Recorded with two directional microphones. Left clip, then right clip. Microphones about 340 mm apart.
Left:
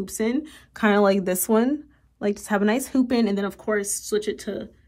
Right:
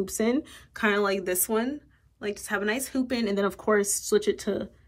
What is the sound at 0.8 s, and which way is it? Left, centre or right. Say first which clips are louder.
Speech: left 5 dB; centre.